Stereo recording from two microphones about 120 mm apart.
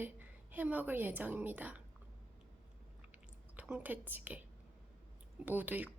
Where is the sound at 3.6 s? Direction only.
10° right (ahead or behind).